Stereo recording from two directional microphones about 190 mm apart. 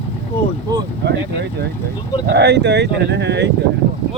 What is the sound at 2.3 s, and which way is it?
Speech, 60° right (ahead or behind).